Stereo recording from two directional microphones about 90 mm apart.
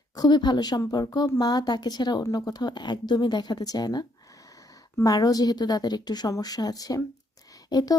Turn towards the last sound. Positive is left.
turn(degrees=45)  # may be behind; listen again after turning